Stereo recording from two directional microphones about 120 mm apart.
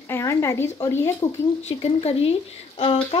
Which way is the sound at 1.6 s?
60° left (ahead or behind).